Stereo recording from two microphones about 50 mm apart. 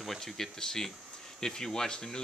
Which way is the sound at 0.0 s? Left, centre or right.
Centre.